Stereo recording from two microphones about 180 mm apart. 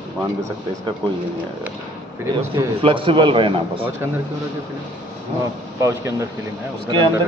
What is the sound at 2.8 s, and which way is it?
A man's voice, 30° right (ahead or behind).